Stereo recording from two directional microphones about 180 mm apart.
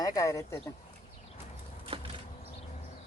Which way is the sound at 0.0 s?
20° left (ahead or behind).